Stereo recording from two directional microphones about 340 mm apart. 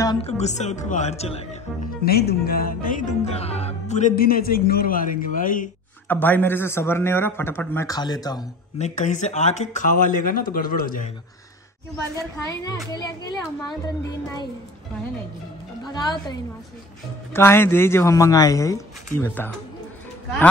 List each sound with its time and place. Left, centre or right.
0.0 s speech: centre
6.0 s a man's voice: centre; by 11.1 s left
12.4 s a man's voice: centre
15.9 s a man's voice: centre